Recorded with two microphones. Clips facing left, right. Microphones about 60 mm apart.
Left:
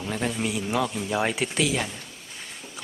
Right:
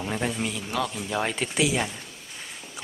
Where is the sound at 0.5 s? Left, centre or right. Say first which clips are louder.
Left 3 dB; centre.